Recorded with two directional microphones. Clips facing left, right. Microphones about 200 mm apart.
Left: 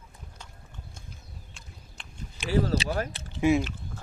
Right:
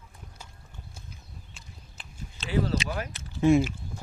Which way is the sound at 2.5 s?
40° left (ahead or behind).